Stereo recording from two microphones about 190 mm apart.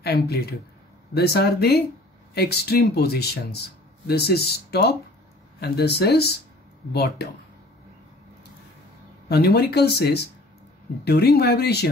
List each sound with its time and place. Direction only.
0.0 s speech: 55° left (ahead or behind)
9.3 s speech: 60° left (ahead or behind)